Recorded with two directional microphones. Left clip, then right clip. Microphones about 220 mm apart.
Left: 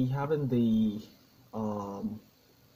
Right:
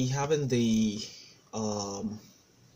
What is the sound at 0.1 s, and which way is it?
Speech, 15° right (ahead or behind).